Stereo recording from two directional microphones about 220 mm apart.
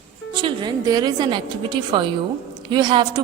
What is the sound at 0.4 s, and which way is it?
A woman's voice, 20° right (ahead or behind).